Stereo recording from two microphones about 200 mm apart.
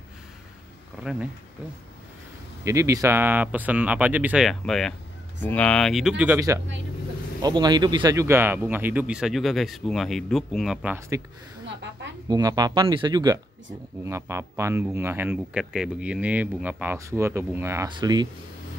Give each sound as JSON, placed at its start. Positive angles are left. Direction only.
{"t": 2.6, "sound": "speech", "side_deg": -15}
{"t": 12.3, "sound": "speech", "side_deg": -20}